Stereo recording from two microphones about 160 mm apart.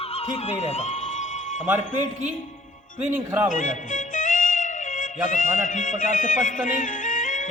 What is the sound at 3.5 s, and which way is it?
A man's voice, 55° left (ahead or behind).